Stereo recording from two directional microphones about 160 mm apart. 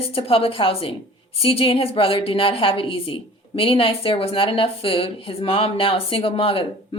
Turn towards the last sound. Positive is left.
turn(degrees=35)  # may be behind; listen again after turning